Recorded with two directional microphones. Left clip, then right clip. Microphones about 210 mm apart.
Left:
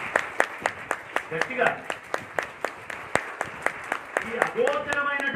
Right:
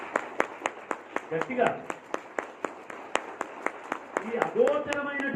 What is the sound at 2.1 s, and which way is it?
Applause, 30° left (ahead or behind).